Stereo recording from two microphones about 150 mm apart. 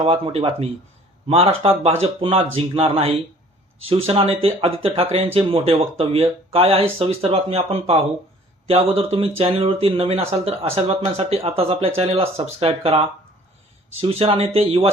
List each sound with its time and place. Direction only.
0.0 s a man's voice: 45° right (ahead or behind)